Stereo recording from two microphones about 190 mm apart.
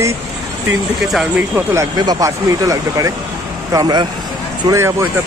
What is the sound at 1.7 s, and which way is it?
Speech, 20° right (ahead or behind).